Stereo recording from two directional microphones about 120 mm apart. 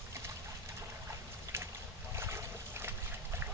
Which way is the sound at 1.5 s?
20° right (ahead or behind).